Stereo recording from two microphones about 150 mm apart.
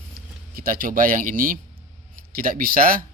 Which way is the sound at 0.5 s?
75° right (ahead or behind).